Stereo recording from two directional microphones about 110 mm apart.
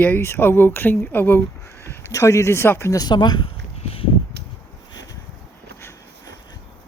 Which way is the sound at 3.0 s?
40° left (ahead or behind).